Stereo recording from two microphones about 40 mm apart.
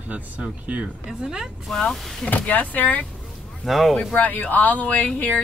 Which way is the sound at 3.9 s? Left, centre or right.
Left.